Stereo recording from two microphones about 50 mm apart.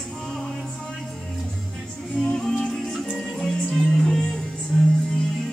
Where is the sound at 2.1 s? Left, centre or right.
Centre.